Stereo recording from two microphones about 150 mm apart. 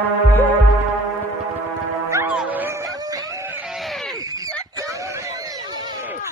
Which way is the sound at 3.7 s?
Centre (ahead or behind).